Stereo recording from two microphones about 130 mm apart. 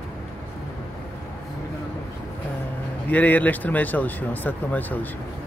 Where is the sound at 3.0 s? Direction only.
10° left (ahead or behind).